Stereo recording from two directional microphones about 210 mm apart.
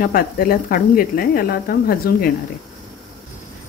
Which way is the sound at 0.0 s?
45° left (ahead or behind).